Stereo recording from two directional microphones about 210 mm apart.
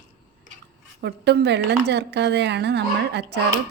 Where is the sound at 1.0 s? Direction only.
50° right (ahead or behind).